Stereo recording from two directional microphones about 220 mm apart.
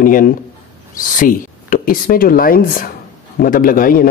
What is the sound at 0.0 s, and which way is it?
A man's voice, 40° left (ahead or behind).